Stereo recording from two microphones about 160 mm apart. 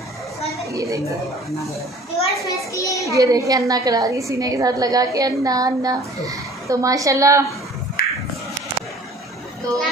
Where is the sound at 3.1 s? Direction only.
20° right (ahead or behind).